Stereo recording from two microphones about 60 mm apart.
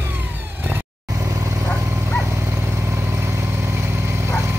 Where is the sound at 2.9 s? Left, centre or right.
Right.